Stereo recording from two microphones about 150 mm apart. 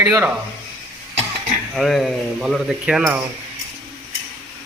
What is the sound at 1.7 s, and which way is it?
Speech, centre (ahead or behind).